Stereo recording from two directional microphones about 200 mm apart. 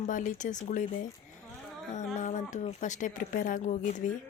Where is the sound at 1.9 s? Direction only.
35° left (ahead or behind).